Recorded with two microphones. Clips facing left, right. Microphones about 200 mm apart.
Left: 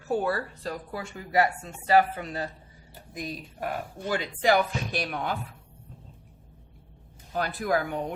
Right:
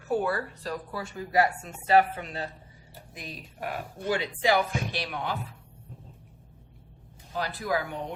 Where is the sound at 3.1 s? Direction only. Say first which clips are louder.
Left 7 dB; 40° left (ahead or behind).